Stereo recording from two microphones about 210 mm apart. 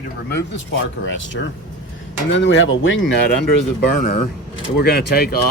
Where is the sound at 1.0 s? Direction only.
65° left (ahead or behind).